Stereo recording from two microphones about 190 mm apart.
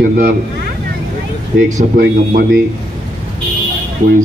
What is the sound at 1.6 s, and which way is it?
Speech, 45° right (ahead or behind).